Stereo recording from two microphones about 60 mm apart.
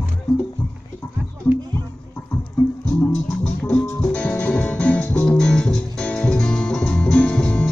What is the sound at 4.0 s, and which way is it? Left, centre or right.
Music, centre.